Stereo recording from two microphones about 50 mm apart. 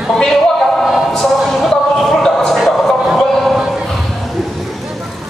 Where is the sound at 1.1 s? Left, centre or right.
Centre.